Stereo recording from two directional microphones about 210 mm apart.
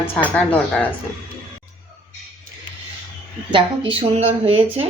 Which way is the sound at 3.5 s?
25° right (ahead or behind).